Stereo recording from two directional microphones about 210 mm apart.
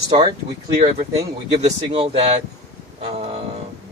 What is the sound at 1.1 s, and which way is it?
Speech, 25° right (ahead or behind).